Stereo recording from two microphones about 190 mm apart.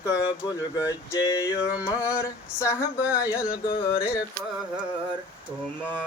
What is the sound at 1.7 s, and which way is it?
Mantra, 5° right (ahead or behind).